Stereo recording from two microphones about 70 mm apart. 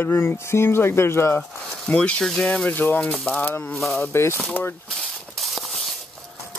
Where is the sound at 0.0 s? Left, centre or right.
Left.